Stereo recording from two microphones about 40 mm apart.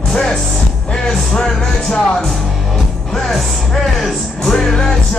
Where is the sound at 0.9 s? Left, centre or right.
Centre.